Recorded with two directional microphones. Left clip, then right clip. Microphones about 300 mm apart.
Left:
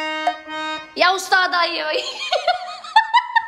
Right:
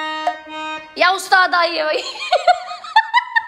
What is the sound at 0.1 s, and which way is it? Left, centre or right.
Music, centre.